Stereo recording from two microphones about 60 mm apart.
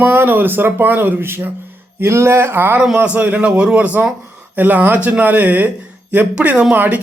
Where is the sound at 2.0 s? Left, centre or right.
Right.